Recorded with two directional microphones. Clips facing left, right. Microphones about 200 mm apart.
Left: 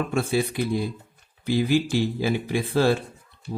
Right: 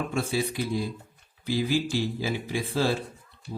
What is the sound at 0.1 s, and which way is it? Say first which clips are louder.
Speech: left 4 dB; 55° left (ahead or behind).